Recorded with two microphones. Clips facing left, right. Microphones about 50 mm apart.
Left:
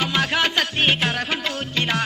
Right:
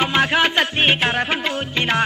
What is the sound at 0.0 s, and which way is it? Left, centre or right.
Music, right.